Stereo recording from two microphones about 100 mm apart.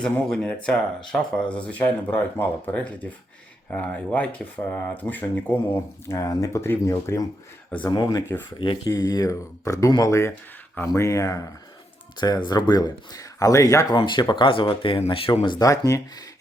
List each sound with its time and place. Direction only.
0.0 s speech: 10° left (ahead or behind)
6.1 s speech: 35° left (ahead or behind)
7.7 s speech: 15° left (ahead or behind)
8.5 s speech: 55° left (ahead or behind)
9.0 s speech: 40° left (ahead or behind)
12.1 s speech: 45° left (ahead or behind)
13.9 s speech: 50° left (ahead or behind)
15.4 s speech: 40° left (ahead or behind)